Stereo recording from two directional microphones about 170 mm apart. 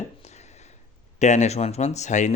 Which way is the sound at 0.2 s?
40° left (ahead or behind).